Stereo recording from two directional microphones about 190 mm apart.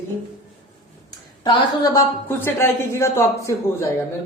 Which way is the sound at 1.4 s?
20° left (ahead or behind).